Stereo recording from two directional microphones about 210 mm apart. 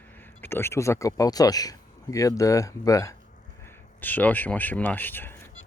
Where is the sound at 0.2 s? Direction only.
10° left (ahead or behind).